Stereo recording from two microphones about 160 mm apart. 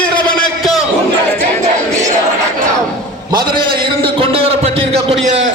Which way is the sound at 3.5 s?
30° right (ahead or behind).